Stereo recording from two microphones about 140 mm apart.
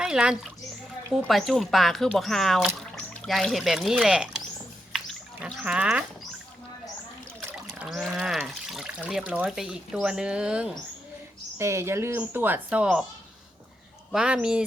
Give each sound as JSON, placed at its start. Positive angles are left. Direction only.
{"t": 0.0, "sound": "a child's voice", "side_deg": -5}
{"t": 4.9, "sound": "a sound", "side_deg": -5}
{"t": 7.8, "sound": "speech", "side_deg": -5}
{"t": 11.5, "sound": "speech", "side_deg": -20}
{"t": 14.1, "sound": "speech", "side_deg": -5}